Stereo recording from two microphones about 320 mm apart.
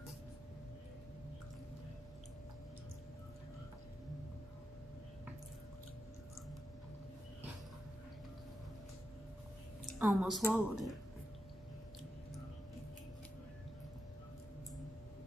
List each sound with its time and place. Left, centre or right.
9.9 s speech: centre